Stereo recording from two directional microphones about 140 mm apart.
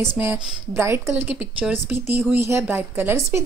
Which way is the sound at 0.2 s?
15° right (ahead or behind).